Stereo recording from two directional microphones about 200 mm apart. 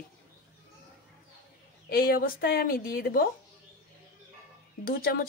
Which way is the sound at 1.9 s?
50° left (ahead or behind).